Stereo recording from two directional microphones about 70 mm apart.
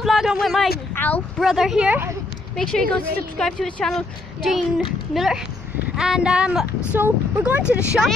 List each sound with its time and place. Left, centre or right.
0.0 s speech: centre
0.9 s a sound: left
1.4 s speech: centre
2.5 s speech: centre
6.9 s speech: right
7.6 s speech: centre